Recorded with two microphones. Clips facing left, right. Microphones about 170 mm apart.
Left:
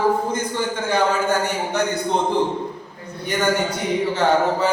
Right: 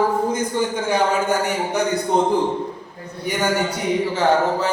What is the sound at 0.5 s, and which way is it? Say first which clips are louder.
A man's voice: left 1 dB; 15° right (ahead or behind).